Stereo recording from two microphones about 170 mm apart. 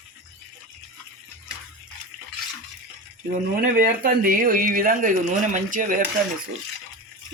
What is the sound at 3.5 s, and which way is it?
Speech, 55° right (ahead or behind).